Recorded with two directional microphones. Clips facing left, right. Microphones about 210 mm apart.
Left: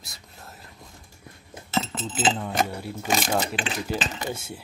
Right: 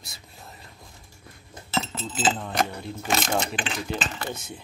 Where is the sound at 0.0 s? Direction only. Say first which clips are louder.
Even; centre (ahead or behind).